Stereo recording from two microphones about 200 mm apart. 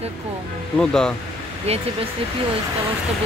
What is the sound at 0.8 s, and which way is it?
Speech, 5° left (ahead or behind).